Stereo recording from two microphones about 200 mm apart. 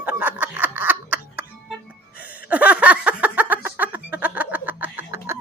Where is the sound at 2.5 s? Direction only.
5° right (ahead or behind).